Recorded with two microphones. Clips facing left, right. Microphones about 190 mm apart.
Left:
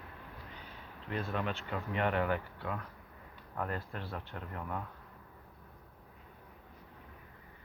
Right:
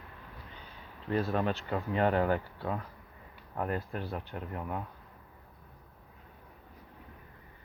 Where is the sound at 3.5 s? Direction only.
15° right (ahead or behind).